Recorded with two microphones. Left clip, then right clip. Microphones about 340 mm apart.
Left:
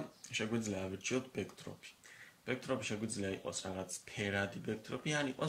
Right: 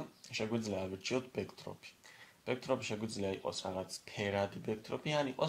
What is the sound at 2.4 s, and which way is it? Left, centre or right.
Speech, centre.